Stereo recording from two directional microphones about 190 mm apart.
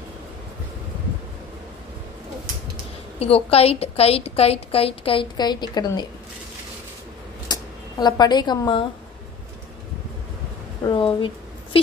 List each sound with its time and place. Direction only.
3.2 s a woman's voice: 30° left (ahead or behind)
7.4 s speech: 20° left (ahead or behind)
10.9 s speech: 25° left (ahead or behind)